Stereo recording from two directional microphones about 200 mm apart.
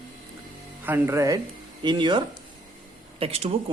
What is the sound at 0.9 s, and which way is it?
A man's voice, 10° right (ahead or behind).